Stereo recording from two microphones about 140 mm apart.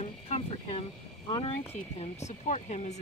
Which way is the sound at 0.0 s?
45° left (ahead or behind).